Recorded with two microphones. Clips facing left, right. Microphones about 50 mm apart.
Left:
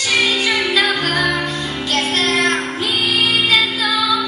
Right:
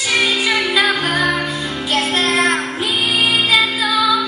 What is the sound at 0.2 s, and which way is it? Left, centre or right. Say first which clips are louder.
Music: even; centre.